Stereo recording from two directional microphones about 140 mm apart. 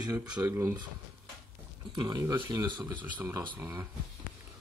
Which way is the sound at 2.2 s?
20° right (ahead or behind).